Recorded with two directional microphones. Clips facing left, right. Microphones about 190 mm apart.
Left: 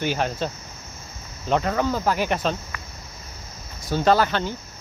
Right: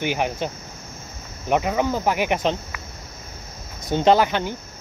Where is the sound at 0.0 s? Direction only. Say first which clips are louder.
Right 1 dB; 15° right (ahead or behind).